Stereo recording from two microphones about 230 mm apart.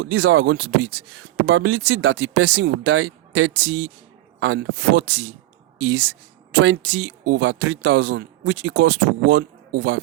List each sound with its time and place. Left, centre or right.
0.0 s speech: right